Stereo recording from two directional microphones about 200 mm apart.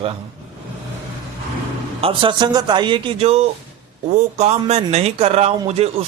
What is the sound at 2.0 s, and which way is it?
A man's voice, 25° right (ahead or behind).